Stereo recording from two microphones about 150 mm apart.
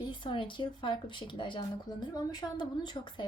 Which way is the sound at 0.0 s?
30° left (ahead or behind).